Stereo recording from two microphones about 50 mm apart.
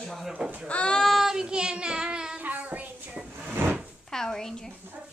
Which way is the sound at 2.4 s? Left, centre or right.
Right.